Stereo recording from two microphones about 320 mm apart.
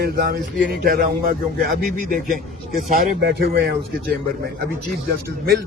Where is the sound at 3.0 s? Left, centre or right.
Right.